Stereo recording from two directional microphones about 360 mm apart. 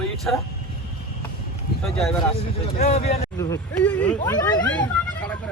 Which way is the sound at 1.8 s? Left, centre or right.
Centre.